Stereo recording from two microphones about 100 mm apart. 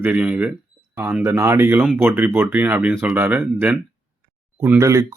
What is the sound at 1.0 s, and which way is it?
A man's voice, 25° right (ahead or behind).